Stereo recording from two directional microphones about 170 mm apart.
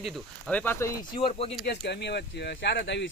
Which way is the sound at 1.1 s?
35° left (ahead or behind).